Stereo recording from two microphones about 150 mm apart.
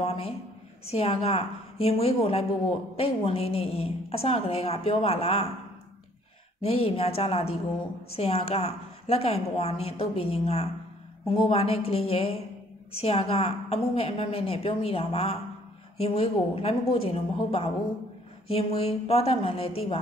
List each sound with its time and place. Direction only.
0.0 s a woman's voice: 40° left (ahead or behind)
6.6 s a woman's voice: 40° left (ahead or behind)